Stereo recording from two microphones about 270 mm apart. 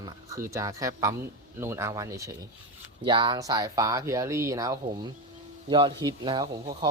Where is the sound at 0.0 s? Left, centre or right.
Centre.